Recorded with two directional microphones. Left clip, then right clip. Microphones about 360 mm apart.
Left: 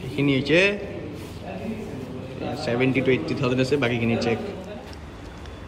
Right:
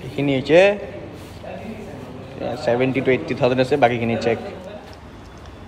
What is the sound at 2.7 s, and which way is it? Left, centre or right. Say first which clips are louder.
A man's voice: right 4 dB; centre.